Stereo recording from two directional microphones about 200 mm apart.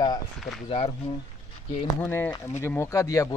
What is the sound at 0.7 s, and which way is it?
Speech, 30° left (ahead or behind).